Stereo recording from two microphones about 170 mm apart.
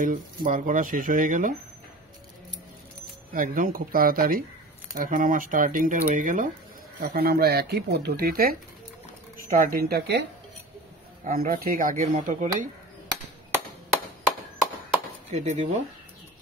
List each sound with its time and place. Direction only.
0.0 s speech: 50° right (ahead or behind)
3.3 s speech: 55° right (ahead or behind)
7.0 s speech: 60° right (ahead or behind)
11.2 s speech: 55° right (ahead or behind)
15.3 s speech: 45° right (ahead or behind)